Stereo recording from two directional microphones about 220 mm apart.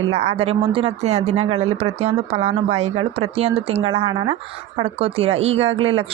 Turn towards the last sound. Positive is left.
turn(degrees=-25)  # may be behind; listen again after turning